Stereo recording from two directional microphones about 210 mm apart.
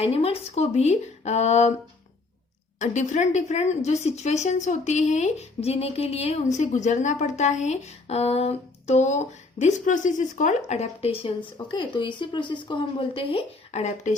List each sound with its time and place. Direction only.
0.0 s a woman's voice: 30° left (ahead or behind)
2.7 s a woman's voice: 35° left (ahead or behind)